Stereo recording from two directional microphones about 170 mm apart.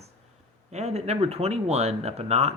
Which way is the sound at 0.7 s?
40° right (ahead or behind).